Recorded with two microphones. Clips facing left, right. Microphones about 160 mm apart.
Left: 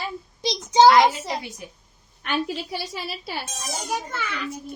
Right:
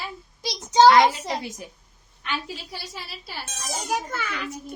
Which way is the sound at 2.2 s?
70° left (ahead or behind).